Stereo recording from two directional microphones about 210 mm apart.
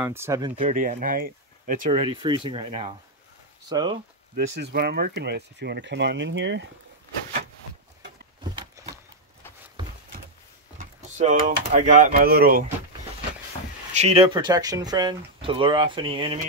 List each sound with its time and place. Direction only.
0.0 s speech: 10° right (ahead or behind)
0.6 s speech: 35° right (ahead or behind)
1.9 s speech: 25° right (ahead or behind)
4.6 s speech: 50° right (ahead or behind)
8.5 s a sound: 15° right (ahead or behind)
10.8 s speech: 35° right (ahead or behind)
13.9 s speech: 30° right (ahead or behind)